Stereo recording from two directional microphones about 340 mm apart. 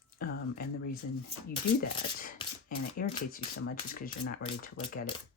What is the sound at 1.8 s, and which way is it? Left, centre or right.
Speech, left.